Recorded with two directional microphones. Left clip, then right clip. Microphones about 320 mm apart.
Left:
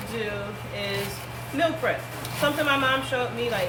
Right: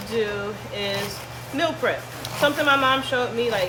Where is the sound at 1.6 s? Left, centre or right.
Right.